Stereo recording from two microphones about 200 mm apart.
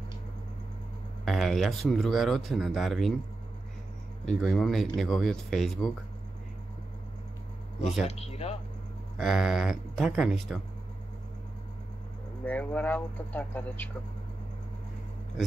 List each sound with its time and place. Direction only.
1.2 s speech: centre (ahead or behind)
4.3 s speech: centre (ahead or behind)
8.1 s speech: 30° left (ahead or behind)
9.2 s speech: 5° right (ahead or behind)
12.4 s speech: 5° left (ahead or behind)